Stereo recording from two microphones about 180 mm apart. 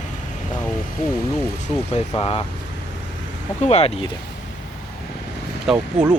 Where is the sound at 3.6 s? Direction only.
35° left (ahead or behind).